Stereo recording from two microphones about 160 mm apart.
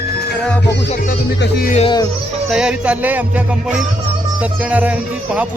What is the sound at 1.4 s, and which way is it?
Speech, 80° left.